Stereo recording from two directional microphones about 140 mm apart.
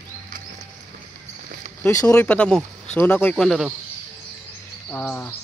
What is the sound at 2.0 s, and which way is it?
Speech, 10° left (ahead or behind).